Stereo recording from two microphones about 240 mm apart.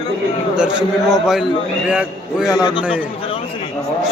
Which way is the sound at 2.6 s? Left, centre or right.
Centre.